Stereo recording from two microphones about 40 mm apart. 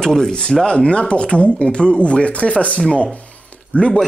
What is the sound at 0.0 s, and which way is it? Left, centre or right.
Speech, centre.